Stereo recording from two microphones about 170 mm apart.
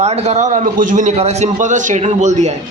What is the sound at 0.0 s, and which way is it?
A man's voice, 40° right (ahead or behind).